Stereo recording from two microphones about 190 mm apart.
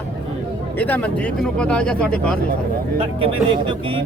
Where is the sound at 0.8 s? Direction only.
10° left (ahead or behind).